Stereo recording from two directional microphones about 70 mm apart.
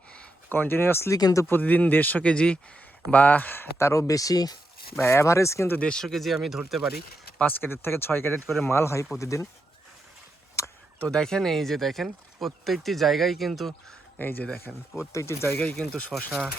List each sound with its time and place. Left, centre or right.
0.5 s speech: left
1.1 s speech: left
1.5 s speech: left
4.9 s speech: left
5.8 s speech: centre
7.6 s speech: left
11.0 s speech: centre
14.2 s speech: left
14.9 s speech: left
15.5 s speech: centre